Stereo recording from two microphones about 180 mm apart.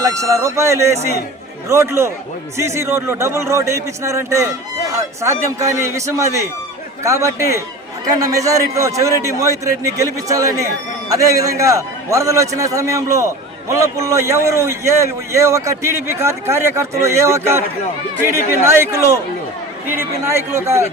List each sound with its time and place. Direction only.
0.0 s a man's voice: 15° right (ahead or behind)